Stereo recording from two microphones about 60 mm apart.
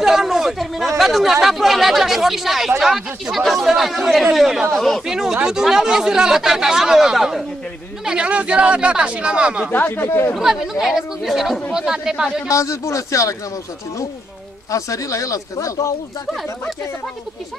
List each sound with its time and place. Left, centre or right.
0.0 s speech: centre
4.7 s speech: centre
5.0 s speech: centre
9.7 s speech: left
10.4 s speech: centre
12.4 s speech: left
14.7 s speech: left